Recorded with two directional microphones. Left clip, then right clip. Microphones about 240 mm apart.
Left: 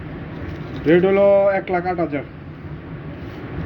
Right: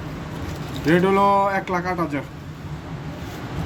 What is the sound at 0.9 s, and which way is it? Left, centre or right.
Speech, right.